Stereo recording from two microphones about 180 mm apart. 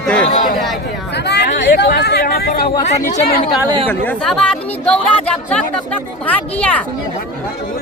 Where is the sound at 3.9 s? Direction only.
5° left (ahead or behind).